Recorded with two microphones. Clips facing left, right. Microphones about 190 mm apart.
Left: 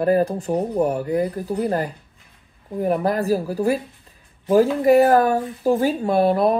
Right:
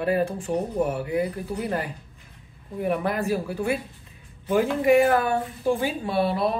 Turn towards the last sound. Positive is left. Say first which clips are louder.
# left 6 dB
turn(degrees=50)  # may be behind; listen again after turning